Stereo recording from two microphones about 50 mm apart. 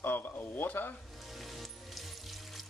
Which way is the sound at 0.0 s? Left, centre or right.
Left.